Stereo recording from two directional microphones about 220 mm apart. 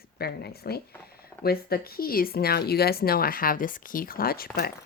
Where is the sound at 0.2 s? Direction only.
45° left (ahead or behind).